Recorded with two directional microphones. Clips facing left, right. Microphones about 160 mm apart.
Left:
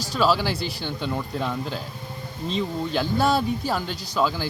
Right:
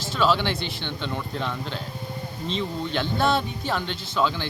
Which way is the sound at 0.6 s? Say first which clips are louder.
Left 2 dB; 40° left (ahead or behind).